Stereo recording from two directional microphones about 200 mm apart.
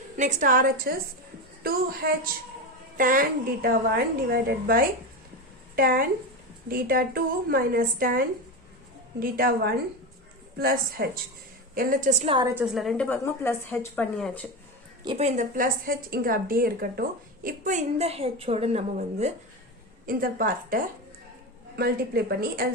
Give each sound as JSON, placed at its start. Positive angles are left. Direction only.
{"t": 0.2, "sound": "a woman's voice", "side_deg": -40}
{"t": 9.2, "sound": "a woman's voice", "side_deg": -50}
{"t": 12.3, "sound": "a woman's voice", "side_deg": -20}
{"t": 12.5, "sound": "a woman's voice", "side_deg": 0}
{"t": 15.0, "sound": "a woman's voice", "side_deg": -30}
{"t": 20.1, "sound": "a woman's voice", "side_deg": -45}